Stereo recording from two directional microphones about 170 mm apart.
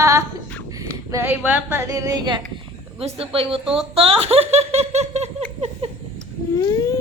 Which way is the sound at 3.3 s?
35° right (ahead or behind).